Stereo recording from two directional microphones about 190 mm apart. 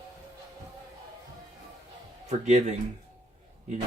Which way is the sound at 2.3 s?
40° right (ahead or behind).